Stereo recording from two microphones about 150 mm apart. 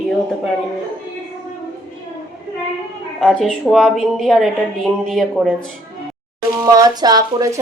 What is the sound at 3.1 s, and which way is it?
A woman's voice, centre (ahead or behind).